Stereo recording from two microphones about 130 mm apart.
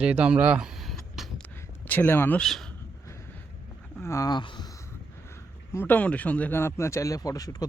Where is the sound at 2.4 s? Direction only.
5° left (ahead or behind).